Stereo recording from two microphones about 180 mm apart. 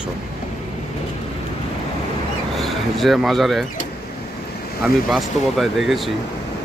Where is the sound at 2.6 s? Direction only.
Centre (ahead or behind).